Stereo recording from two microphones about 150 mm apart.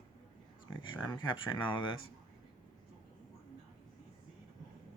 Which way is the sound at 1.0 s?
30° left (ahead or behind).